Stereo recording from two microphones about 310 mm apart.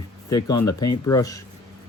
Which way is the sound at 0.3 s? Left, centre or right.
Centre.